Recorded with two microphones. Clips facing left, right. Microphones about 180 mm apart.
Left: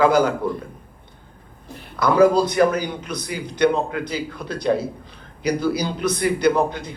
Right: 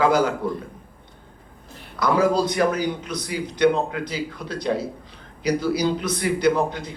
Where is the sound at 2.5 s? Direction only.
55° left (ahead or behind).